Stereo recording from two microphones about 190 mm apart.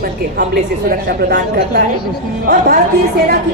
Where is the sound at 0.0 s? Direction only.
50° right (ahead or behind).